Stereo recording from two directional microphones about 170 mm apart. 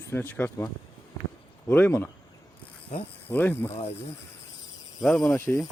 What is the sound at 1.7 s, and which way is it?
Speech, 10° left (ahead or behind).